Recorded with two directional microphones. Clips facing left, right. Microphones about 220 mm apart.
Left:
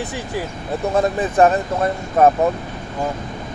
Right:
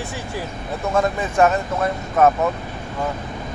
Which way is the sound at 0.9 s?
35° left (ahead or behind).